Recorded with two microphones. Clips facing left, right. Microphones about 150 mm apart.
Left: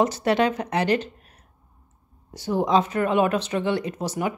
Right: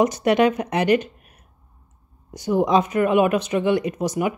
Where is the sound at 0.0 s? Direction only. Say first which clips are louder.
Right 3 dB; 15° right (ahead or behind).